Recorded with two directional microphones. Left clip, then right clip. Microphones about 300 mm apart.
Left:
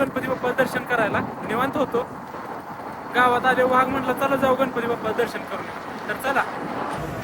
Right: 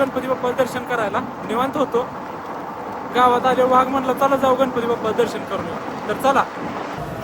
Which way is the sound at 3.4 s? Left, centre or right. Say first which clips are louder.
Right 3 dB; centre.